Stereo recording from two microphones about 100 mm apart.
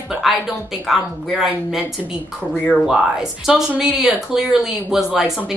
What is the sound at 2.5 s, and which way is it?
Speech, 10° left (ahead or behind).